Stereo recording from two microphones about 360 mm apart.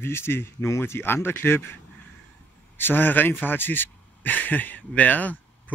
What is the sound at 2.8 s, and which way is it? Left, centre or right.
Speech, centre.